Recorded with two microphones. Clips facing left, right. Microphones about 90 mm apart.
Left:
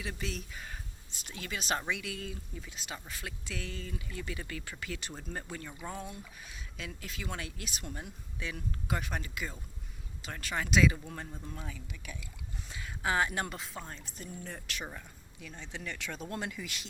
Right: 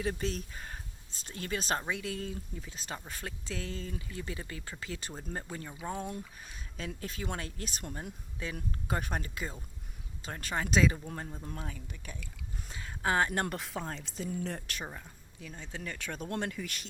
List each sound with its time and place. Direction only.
0.0 s speech: 40° right (ahead or behind); by 6.1 s 15° right (ahead or behind)
6.1 s speech: 40° right (ahead or behind); by 14.6 s 90° right
15.7 s speech: 35° right (ahead or behind)